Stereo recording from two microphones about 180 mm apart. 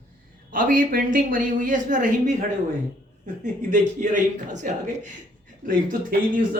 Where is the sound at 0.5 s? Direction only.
50° right (ahead or behind).